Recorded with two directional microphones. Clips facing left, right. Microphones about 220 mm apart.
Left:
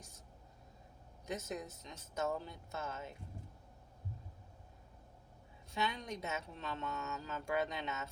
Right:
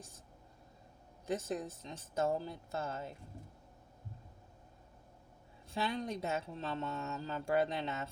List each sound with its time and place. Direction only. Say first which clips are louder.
1.3 s speech: right 5 dB; 30° right (ahead or behind)
5.7 s speech: right 3 dB; 35° right (ahead or behind)